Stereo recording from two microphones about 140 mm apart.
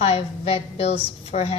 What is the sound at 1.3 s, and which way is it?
Speech, 60° left (ahead or behind).